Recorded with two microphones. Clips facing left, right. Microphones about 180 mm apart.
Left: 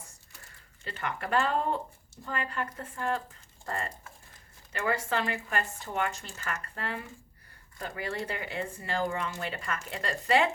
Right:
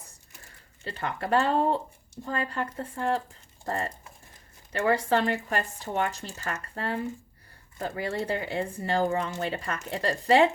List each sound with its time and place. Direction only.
0.9 s speech: 30° right (ahead or behind)